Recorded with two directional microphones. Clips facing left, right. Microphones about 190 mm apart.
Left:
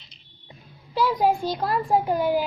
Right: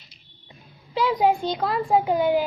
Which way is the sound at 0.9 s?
20° right (ahead or behind).